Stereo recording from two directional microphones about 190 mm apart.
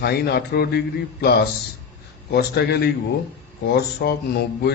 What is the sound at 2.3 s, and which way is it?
Speech, 60° left (ahead or behind).